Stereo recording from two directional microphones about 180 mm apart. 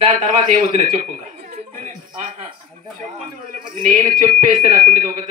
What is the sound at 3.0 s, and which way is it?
Speech, 45° right (ahead or behind).